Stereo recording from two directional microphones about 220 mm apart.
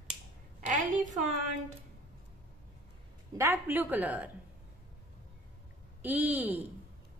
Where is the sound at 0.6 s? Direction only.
35° right (ahead or behind).